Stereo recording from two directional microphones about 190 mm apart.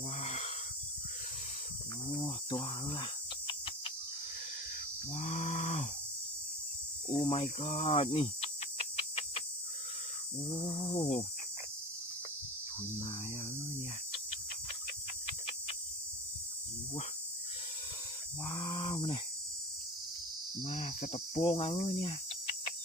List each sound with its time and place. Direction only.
0.2 s wheeze: 35° left (ahead or behind)
2.2 s cricket: 20° left (ahead or behind)
5.1 s livestock: 40° left (ahead or behind)
7.2 s cricket: 30° left (ahead or behind)
10.5 s cricket: 30° left (ahead or behind)
18.4 s a sound: 25° left (ahead or behind)
20.7 s cricket: 40° left (ahead or behind)
21.3 s cricket: 25° left (ahead or behind)
21.8 s speech: 35° left (ahead or behind)